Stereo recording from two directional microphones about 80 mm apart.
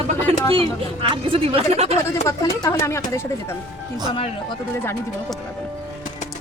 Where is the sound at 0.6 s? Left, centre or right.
Right.